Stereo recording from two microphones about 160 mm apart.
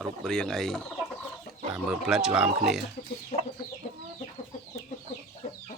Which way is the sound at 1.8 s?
5° right (ahead or behind).